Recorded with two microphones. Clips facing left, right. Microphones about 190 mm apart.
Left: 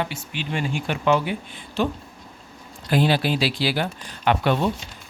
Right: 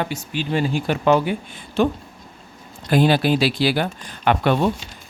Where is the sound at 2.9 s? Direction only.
50° right (ahead or behind).